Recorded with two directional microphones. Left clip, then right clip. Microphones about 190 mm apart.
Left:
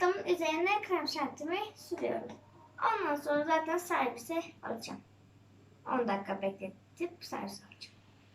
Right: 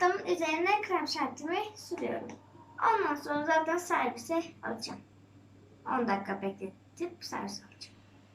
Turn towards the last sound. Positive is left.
turn(degrees=0)  # may be behind; listen again after turning